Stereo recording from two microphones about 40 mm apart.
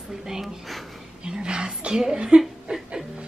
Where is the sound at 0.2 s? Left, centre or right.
Centre.